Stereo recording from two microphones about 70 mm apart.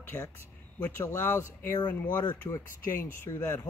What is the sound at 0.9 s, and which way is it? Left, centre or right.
Speech, left.